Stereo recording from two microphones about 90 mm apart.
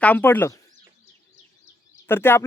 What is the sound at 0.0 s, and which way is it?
Speech, 20° left (ahead or behind).